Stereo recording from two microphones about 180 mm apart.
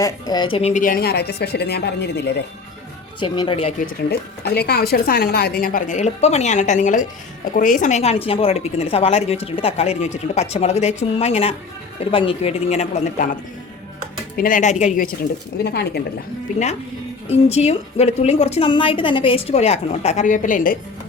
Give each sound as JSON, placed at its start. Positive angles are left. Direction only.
{"t": 0.0, "sound": "a woman's voice", "side_deg": 25}
{"t": 0.6, "sound": "speech", "side_deg": 45}
{"t": 3.2, "sound": "a woman's voice", "side_deg": 25}
{"t": 4.1, "sound": "a woman's voice", "side_deg": 65}
{"t": 14.3, "sound": "speech", "side_deg": 50}
{"t": 15.6, "sound": "speech", "side_deg": 65}
{"t": 17.3, "sound": "a woman's voice", "side_deg": 35}